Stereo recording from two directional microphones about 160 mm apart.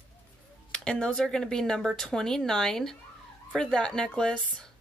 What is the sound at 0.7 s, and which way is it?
Speech, 5° left (ahead or behind).